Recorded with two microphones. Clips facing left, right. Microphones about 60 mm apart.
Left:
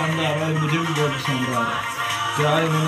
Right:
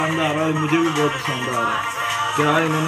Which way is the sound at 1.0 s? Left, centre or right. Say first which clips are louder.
Right 2 dB; right.